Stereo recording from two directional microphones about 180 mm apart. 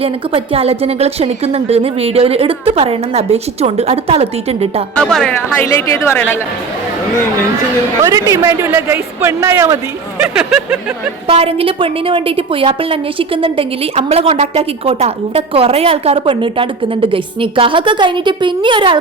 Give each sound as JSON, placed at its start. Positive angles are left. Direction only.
{"t": 0.0, "sound": "a woman's voice", "side_deg": -30}
{"t": 4.9, "sound": "speech", "side_deg": 5}
{"t": 5.6, "sound": "a woman's voice", "side_deg": 15}
{"t": 8.0, "sound": "a man's voice", "side_deg": -15}
{"t": 10.3, "sound": "speech", "side_deg": -5}
{"t": 11.3, "sound": "a woman's voice", "side_deg": -30}